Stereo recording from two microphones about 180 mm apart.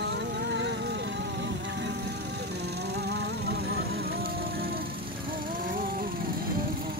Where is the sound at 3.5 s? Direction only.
65° right (ahead or behind).